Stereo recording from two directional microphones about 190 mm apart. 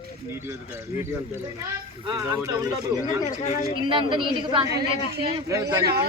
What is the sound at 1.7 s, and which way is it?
Speech, 15° right (ahead or behind).